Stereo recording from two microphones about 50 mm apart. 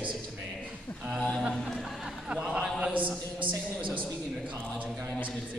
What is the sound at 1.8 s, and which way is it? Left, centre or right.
Speech, centre.